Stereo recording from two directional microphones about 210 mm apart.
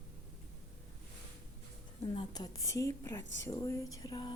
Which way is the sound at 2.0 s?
20° left (ahead or behind).